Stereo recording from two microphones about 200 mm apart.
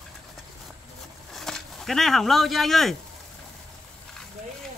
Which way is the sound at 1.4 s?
Centre (ahead or behind).